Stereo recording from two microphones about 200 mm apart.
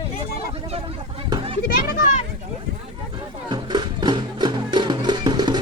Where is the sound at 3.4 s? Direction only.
20° right (ahead or behind).